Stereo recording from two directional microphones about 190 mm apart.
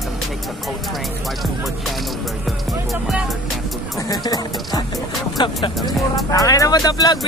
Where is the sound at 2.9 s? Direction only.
Centre (ahead or behind).